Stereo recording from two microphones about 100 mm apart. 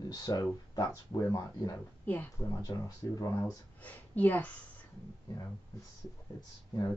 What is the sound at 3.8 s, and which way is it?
Speech, 15° left (ahead or behind).